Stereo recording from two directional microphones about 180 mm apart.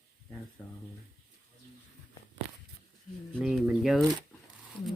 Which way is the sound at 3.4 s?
5° right (ahead or behind).